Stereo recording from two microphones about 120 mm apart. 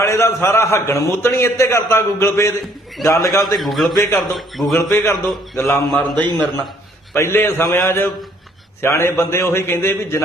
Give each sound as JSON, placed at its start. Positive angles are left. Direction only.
{"t": 0.0, "sound": "a sound", "side_deg": 25}
{"t": 0.4, "sound": "a man's voice", "side_deg": 25}
{"t": 3.4, "sound": "a man's voice", "side_deg": 0}
{"t": 3.9, "sound": "a man's voice", "side_deg": 25}
{"t": 4.4, "sound": "a man's voice", "side_deg": 0}
{"t": 4.8, "sound": "a man's voice", "side_deg": 25}